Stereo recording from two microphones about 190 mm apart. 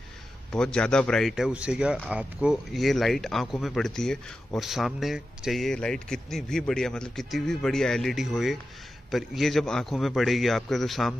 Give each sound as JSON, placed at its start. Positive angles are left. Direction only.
{"t": 0.5, "sound": "speech", "side_deg": 5}